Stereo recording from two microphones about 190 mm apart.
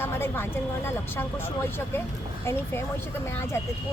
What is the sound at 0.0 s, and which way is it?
Speech, 10° left (ahead or behind).